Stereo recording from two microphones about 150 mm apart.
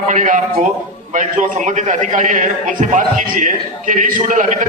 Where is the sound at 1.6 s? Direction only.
55° right (ahead or behind).